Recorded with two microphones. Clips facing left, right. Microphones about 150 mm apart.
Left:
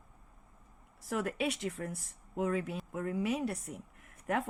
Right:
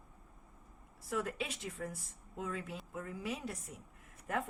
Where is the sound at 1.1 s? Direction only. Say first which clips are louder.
Left 5 dB; 70° left (ahead or behind).